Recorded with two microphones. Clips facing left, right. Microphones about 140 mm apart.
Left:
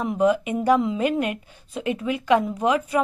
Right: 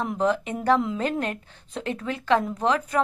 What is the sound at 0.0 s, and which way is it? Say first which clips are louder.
A woman's voice: left 4 dB; 10° left (ahead or behind).